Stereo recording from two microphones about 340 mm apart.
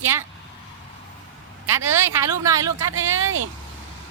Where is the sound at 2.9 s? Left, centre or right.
Right.